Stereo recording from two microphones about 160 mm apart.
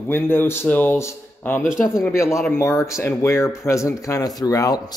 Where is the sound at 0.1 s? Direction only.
15° left (ahead or behind).